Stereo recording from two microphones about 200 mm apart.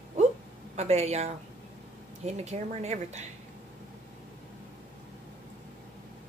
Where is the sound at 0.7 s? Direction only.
30° right (ahead or behind).